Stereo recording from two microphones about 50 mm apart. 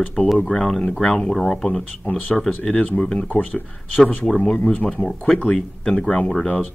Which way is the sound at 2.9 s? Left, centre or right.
Left.